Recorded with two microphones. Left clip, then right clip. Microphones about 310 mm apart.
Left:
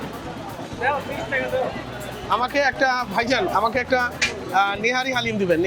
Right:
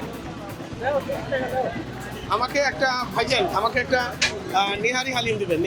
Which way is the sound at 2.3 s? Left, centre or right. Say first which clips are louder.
Left 2 dB; left.